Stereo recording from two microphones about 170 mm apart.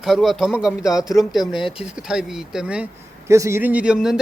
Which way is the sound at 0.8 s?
20° left (ahead or behind).